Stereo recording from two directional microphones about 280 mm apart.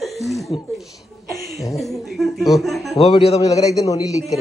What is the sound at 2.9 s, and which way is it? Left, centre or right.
A man's voice, left.